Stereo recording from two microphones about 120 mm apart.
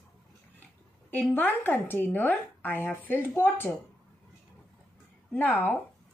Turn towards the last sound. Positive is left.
turn(degrees=15)  # may be behind; listen again after turning